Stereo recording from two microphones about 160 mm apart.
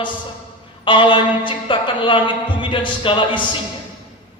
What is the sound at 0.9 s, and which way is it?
Speech, 30° left (ahead or behind).